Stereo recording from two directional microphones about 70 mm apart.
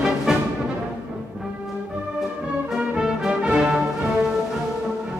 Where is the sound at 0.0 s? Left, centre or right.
Centre.